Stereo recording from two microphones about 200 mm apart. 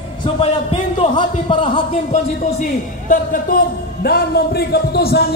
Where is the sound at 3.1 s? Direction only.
45° left (ahead or behind).